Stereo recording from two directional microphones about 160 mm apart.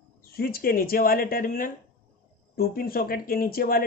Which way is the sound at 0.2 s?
70° left (ahead or behind).